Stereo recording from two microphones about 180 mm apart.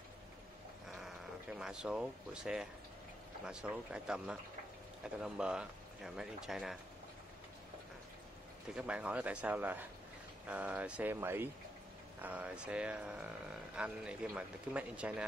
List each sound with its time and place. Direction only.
0.8 s sheep: centre (ahead or behind)
3.4 s speech: 5° right (ahead or behind)
8.7 s speech: 5° right (ahead or behind)